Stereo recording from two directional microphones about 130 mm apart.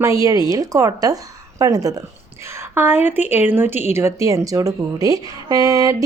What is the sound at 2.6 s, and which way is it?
A woman's voice, 15° right (ahead or behind).